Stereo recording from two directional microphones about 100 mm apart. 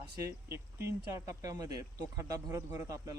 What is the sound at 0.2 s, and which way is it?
Speech, 30° right (ahead or behind).